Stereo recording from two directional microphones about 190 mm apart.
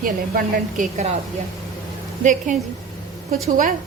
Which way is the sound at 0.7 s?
45° right (ahead or behind).